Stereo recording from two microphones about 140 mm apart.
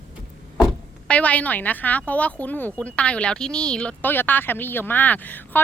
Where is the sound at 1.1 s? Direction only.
10° left (ahead or behind).